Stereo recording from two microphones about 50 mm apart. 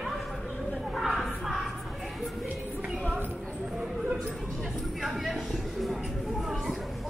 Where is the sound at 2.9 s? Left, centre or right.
Centre.